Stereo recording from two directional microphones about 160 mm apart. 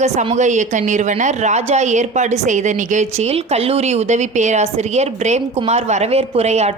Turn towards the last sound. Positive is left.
turn(degrees=-45)  # may be behind; listen again after turning